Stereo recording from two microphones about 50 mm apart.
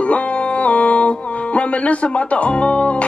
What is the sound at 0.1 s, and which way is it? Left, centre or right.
Music, left.